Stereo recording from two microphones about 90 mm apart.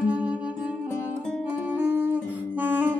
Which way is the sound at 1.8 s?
20° right (ahead or behind).